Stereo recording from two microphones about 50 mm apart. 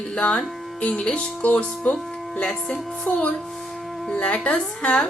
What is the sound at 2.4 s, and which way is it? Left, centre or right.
Speech, centre.